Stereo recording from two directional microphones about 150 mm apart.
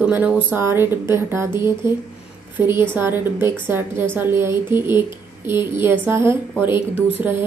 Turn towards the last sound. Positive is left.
turn(degrees=-15)  # may be behind; listen again after turning